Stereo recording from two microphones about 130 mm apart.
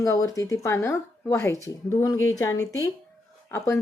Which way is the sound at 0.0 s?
25° left (ahead or behind).